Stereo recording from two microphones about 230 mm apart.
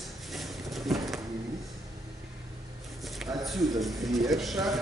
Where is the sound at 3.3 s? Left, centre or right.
Centre.